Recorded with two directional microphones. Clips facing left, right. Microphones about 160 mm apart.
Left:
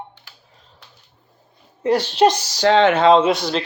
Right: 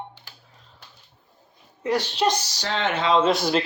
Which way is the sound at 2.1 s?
90° left.